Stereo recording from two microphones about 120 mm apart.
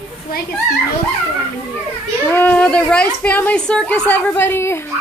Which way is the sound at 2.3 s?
20° left (ahead or behind).